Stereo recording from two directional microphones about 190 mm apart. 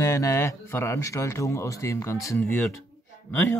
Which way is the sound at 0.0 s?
15° left (ahead or behind).